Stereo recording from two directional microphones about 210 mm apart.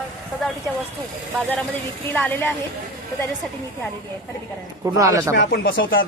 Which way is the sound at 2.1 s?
10° left (ahead or behind).